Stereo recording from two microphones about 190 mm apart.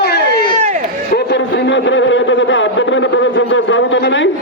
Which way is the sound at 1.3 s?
65° left (ahead or behind).